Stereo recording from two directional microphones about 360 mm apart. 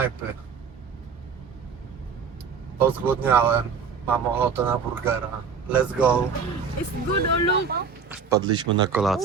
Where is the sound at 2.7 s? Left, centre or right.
Centre.